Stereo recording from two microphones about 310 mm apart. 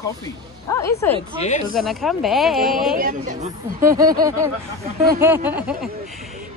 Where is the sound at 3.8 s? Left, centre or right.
Centre.